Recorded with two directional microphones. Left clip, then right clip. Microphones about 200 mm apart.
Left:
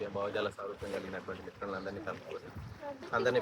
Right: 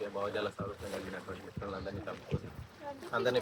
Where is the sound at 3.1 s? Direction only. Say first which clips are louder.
Left 1 dB; 20° left (ahead or behind).